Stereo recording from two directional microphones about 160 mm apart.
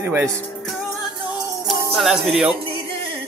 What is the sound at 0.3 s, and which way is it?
Speech, 5° left (ahead or behind).